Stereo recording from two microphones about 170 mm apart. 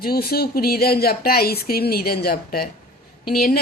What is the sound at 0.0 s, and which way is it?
Speech, 65° left (ahead or behind).